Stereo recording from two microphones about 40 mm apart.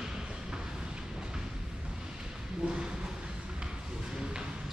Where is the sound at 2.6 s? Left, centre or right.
Right.